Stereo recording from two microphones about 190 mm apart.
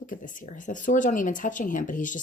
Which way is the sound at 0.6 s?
45° left (ahead or behind).